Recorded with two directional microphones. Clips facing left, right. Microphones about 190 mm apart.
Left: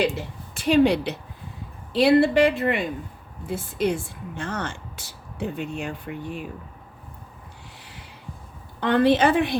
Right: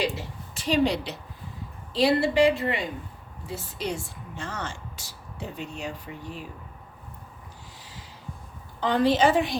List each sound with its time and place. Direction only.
0.0 s a woman's voice: 55° left (ahead or behind)
8.8 s a woman's voice: 60° left (ahead or behind)